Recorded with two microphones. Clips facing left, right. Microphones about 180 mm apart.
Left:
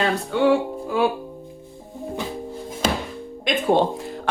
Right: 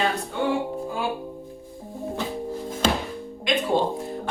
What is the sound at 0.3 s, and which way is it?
Speech, 80° left.